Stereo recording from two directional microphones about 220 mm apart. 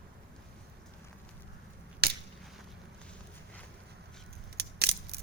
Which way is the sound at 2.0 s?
45° right (ahead or behind).